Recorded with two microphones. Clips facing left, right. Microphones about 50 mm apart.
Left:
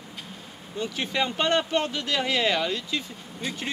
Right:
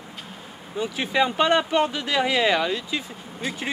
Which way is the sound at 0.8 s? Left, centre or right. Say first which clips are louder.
Right 5 dB; centre.